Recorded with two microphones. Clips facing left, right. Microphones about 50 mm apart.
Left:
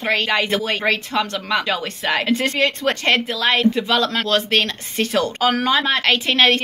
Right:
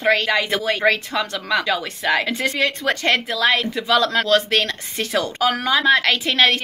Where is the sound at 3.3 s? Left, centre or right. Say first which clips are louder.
Left 1 dB; centre.